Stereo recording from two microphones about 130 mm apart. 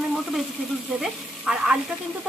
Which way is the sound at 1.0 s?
5° right (ahead or behind).